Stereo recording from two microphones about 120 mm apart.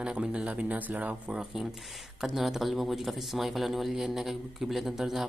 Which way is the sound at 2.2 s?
Centre (ahead or behind).